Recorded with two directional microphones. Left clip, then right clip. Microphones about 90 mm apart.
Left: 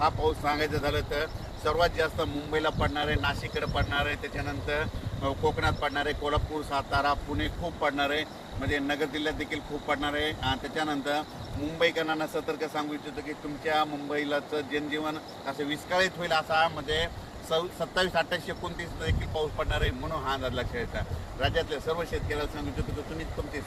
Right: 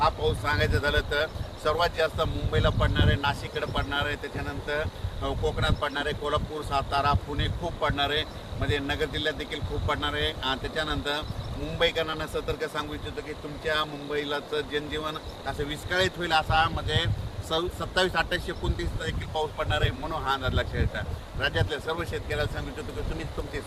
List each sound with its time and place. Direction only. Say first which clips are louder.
0.0 s speech: right 1 dB; 30° right (ahead or behind)